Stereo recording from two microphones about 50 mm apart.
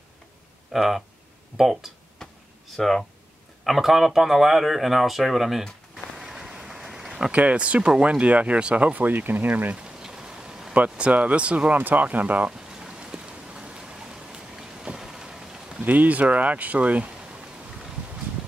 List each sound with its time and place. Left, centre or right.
0.7 s speech: centre
2.8 s speech: centre
3.6 s speech: centre
6.1 s a sound: centre
7.3 s speech: right
9.8 s a sound: centre
10.7 s speech: right
12.4 s a sound: centre
15.8 s speech: right